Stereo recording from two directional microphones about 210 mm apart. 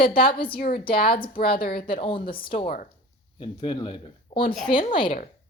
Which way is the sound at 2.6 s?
40° left (ahead or behind).